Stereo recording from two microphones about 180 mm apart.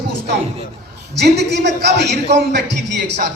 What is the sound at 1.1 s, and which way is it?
A woman's voice, 70° right (ahead or behind).